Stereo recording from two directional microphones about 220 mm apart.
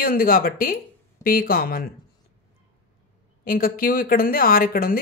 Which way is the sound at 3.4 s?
40° left (ahead or behind).